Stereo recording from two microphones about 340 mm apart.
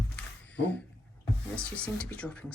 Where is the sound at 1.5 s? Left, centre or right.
Centre.